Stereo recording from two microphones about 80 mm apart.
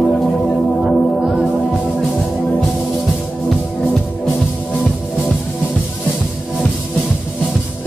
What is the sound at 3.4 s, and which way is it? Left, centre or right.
Music, centre.